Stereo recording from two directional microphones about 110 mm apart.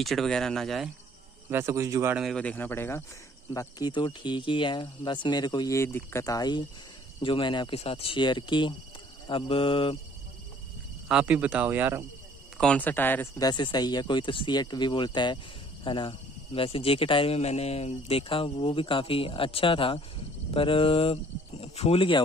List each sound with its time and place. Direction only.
0.0 s speech: centre (ahead or behind)
1.5 s speech: 25° right (ahead or behind)
2.3 s speech: 15° left (ahead or behind)
3.5 s speech: 35° left (ahead or behind)
5.8 s speech: 25° left (ahead or behind)
7.2 s speech: 50° left (ahead or behind)
7.7 s speech: 65° left (ahead or behind)
11.1 s speech: 10° right (ahead or behind)
12.5 s speech: 10° left (ahead or behind)
13.4 s speech: 40° left (ahead or behind)